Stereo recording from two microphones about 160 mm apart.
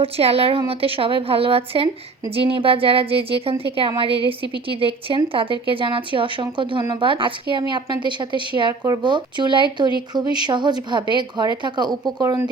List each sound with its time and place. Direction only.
0.0 s speech: 40° right (ahead or behind); by 12.5 s 20° right (ahead or behind)